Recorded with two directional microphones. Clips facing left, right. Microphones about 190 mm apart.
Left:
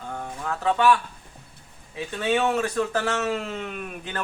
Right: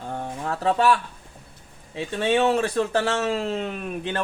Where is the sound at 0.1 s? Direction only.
35° right (ahead or behind).